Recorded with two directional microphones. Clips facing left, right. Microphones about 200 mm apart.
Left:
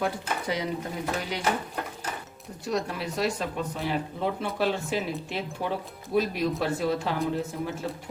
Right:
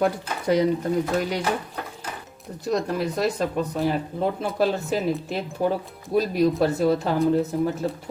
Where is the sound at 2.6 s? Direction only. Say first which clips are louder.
Right 5 dB; 40° right (ahead or behind).